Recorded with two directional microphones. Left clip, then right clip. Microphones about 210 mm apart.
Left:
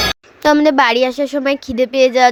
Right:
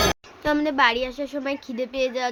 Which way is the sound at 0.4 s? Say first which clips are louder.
Left 9 dB; 40° left (ahead or behind).